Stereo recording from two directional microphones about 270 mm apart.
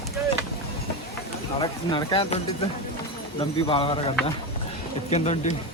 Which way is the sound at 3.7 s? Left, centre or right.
Centre.